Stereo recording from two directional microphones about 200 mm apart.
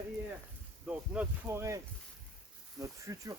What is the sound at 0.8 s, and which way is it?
Speech, 5° right (ahead or behind).